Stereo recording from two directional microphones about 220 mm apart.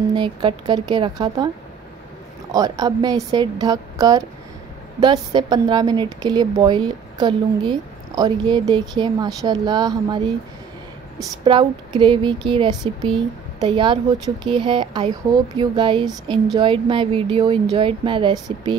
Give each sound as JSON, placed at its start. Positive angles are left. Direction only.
{"t": 0.1, "sound": "a woman's voice", "side_deg": -20}
{"t": 2.5, "sound": "a woman's voice", "side_deg": -15}
{"t": 11.4, "sound": "a woman's voice", "side_deg": -25}